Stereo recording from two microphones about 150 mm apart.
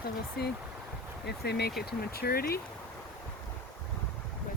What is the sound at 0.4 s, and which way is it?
Speech, 90° left.